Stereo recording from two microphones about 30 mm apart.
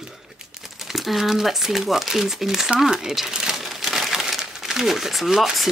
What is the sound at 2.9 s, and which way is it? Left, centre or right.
Speech, right.